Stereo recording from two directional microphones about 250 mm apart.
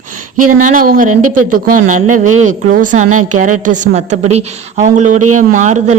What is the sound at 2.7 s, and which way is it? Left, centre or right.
Speech, right.